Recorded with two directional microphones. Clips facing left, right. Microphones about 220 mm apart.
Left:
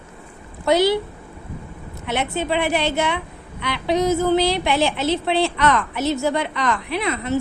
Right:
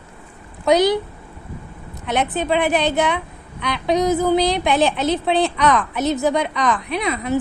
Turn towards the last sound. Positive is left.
turn(degrees=-15)  # may be behind; listen again after turning